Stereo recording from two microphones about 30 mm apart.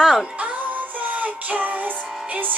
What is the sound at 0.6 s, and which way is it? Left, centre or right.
Music, right.